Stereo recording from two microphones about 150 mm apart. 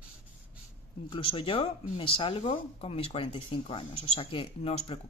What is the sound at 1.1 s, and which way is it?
Speech, 35° left (ahead or behind).